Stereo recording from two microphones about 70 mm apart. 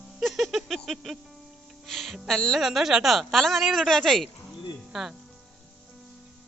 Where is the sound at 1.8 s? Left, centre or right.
Centre.